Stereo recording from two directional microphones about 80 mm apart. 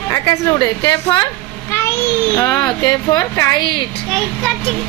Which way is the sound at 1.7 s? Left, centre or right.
Left.